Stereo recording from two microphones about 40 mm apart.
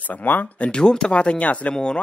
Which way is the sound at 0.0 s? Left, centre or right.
Left.